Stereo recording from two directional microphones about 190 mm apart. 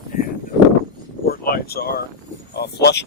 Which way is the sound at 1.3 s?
55° left (ahead or behind).